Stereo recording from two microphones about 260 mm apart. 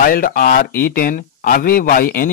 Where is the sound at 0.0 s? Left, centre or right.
Left.